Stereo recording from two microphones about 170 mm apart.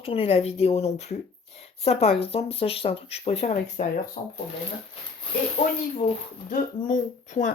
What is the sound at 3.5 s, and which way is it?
Speech, 50° left (ahead or behind).